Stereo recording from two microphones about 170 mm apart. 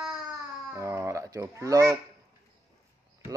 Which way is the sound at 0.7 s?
20° right (ahead or behind).